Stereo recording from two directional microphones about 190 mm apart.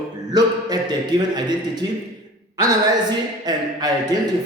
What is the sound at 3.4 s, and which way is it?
Speech, 20° right (ahead or behind).